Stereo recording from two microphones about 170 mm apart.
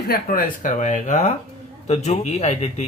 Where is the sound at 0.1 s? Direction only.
55° left (ahead or behind).